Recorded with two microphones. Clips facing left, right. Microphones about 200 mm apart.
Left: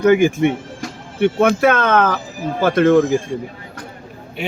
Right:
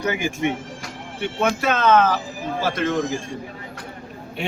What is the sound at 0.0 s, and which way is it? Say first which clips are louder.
Speech: left 10 dB; 55° left (ahead or behind).